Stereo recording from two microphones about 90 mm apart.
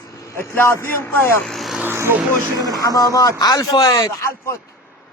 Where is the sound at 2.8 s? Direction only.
40° left (ahead or behind).